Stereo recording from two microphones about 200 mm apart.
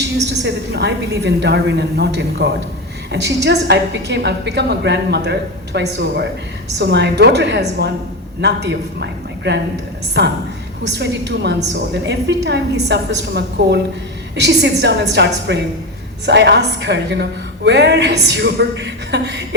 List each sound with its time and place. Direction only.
0.4 s a woman's voice: 60° right (ahead or behind)